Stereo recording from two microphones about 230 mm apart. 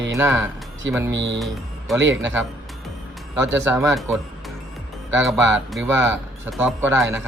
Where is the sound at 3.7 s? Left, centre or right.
Centre.